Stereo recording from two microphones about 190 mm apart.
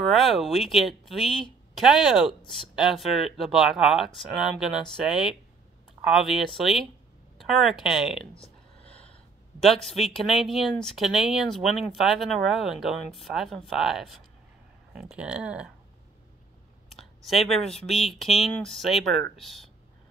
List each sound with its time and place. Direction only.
0.0 s speech: centre (ahead or behind)
9.6 s speech: centre (ahead or behind)
16.9 s speech: centre (ahead or behind)